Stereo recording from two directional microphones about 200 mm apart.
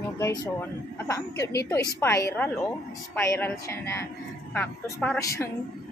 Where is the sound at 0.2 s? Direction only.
15° left (ahead or behind).